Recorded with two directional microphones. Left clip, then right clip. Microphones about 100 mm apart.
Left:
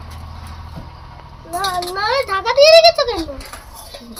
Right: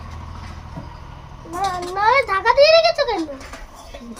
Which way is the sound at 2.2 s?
15° right (ahead or behind).